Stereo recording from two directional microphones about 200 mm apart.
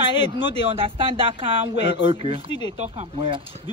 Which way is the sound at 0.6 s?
30° right (ahead or behind).